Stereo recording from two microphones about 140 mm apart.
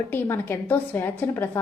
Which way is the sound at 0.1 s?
15° left (ahead or behind).